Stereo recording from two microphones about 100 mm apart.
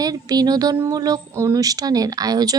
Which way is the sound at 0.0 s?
40° right (ahead or behind).